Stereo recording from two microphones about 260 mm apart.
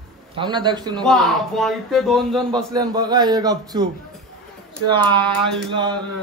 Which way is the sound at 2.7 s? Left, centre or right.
Centre.